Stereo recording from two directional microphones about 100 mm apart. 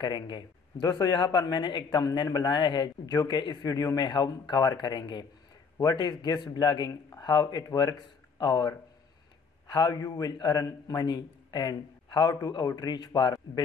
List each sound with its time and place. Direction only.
0.0 s speech: 50° left (ahead or behind)
6.9 s speech: 30° left (ahead or behind)
7.2 s speech: 45° left (ahead or behind)